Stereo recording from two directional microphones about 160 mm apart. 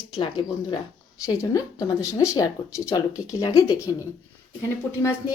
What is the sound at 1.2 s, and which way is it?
Speech, 20° left (ahead or behind).